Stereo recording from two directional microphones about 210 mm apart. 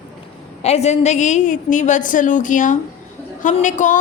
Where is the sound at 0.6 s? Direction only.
30° left (ahead or behind).